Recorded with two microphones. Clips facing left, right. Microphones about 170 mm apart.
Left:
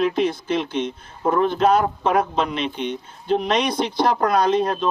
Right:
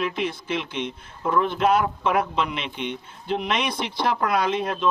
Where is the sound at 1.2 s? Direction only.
40° left (ahead or behind).